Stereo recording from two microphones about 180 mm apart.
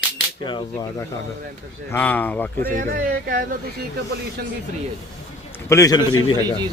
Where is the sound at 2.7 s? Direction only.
50° right (ahead or behind).